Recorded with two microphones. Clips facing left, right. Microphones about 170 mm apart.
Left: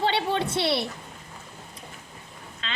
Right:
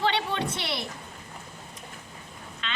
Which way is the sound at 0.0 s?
30° left (ahead or behind).